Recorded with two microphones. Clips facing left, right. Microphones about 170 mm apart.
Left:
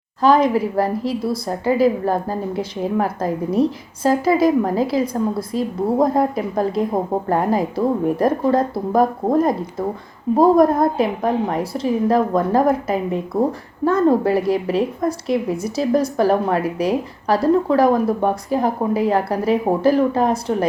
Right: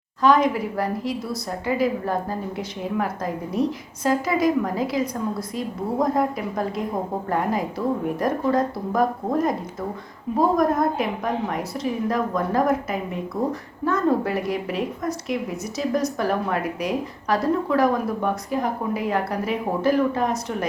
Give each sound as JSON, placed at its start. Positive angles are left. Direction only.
{"t": 0.2, "sound": "a woman's voice", "side_deg": 30}